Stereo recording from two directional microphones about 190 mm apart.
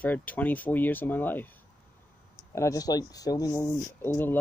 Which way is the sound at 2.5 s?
15° left (ahead or behind).